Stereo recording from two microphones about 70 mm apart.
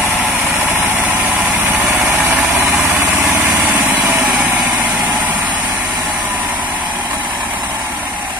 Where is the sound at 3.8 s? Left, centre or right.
Right.